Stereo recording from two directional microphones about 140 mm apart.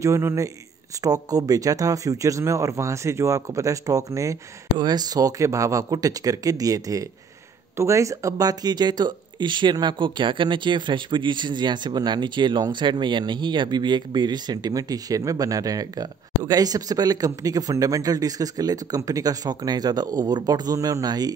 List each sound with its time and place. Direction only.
0.0 s speech: 20° right (ahead or behind)